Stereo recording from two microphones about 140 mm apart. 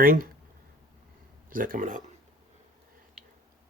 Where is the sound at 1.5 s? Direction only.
80° right.